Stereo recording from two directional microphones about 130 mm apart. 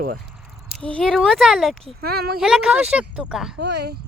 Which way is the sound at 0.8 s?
10° left (ahead or behind).